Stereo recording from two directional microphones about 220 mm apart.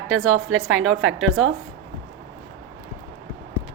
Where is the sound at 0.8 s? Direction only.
60° right (ahead or behind).